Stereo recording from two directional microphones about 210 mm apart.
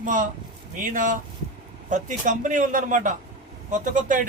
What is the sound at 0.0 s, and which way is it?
Speech, 40° right (ahead or behind).